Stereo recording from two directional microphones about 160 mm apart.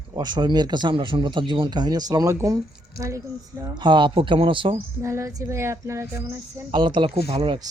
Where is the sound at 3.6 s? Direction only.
30° right (ahead or behind).